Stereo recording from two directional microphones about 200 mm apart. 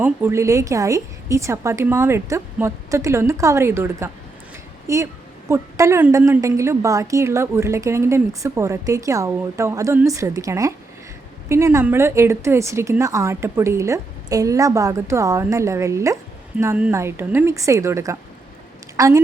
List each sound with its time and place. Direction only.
0.0 s a woman's voice: 10° right (ahead or behind)